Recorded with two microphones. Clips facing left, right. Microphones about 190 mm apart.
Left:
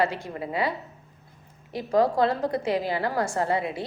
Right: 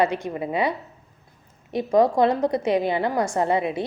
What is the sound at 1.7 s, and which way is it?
A woman's voice, 20° right (ahead or behind).